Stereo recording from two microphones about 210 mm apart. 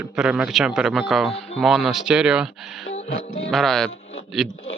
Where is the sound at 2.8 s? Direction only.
35° left (ahead or behind).